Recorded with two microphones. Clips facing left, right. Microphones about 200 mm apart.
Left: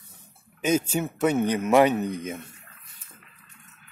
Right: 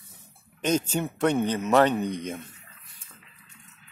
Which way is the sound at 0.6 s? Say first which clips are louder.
Left 2 dB; 10° left (ahead or behind).